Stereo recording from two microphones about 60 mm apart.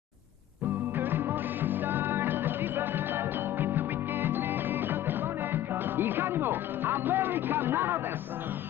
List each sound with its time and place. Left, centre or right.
0.9 s music: right